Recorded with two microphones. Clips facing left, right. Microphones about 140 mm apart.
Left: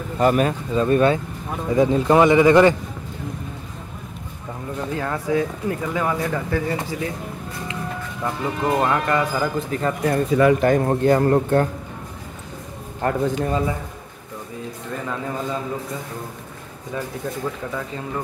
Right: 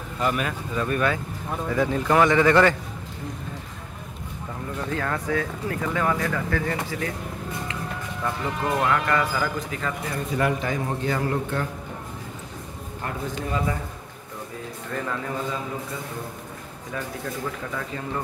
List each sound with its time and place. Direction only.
0.2 s speech: 40° left (ahead or behind)
0.7 s a man's voice: 25° left (ahead or behind)
4.9 s speech: 20° left (ahead or behind)
8.2 s a man's voice: 25° left (ahead or behind)
10.0 s a man's voice: 55° left (ahead or behind)
13.0 s a man's voice: 45° left (ahead or behind)